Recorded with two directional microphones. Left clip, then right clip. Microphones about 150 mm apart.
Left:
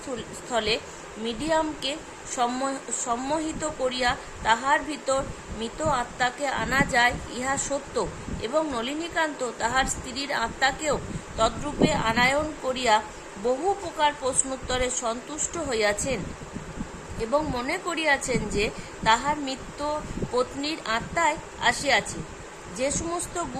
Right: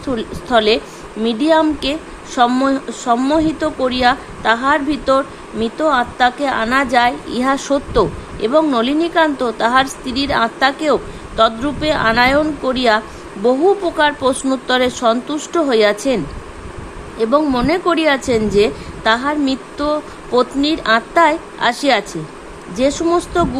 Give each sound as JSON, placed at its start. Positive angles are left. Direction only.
{"t": 0.2, "sound": "a woman's voice", "side_deg": -45}
{"t": 14.0, "sound": "a woman's voice", "side_deg": -45}